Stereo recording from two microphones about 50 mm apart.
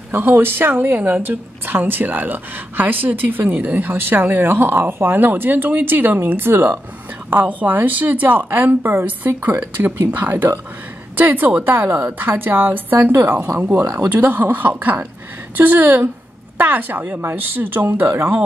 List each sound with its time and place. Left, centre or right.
0.1 s a woman's voice: right
17.8 s speech: right